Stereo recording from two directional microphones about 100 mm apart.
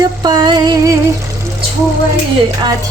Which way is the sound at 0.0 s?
45° right (ahead or behind).